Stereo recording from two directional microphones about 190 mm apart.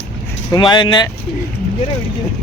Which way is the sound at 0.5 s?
25° left (ahead or behind).